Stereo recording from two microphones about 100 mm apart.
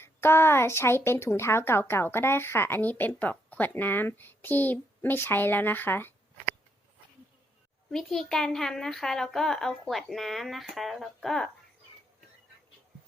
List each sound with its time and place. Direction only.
0.0 s speech: 25° left (ahead or behind)
7.9 s speech: 5° left (ahead or behind)